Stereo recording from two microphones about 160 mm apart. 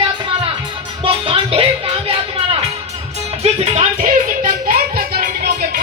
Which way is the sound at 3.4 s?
40° right (ahead or behind).